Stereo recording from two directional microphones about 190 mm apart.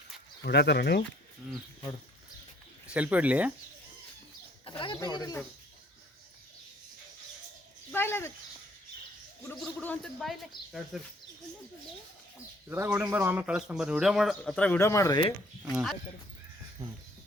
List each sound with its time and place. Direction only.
0.4 s speech: 60° left (ahead or behind)
2.9 s speech: 5° right (ahead or behind)
4.6 s speech: 25° left (ahead or behind)
7.9 s a sound: 10° left (ahead or behind)
9.8 s a man's voice: 5° left (ahead or behind)
12.6 s a man's voice: 10° right (ahead or behind); by 15.7 s 20° left (ahead or behind)